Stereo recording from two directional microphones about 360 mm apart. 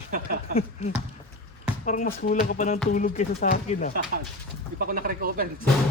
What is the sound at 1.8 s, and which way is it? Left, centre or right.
Speech, left.